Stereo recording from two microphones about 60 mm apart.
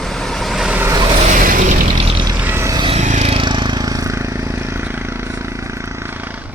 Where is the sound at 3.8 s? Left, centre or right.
Right.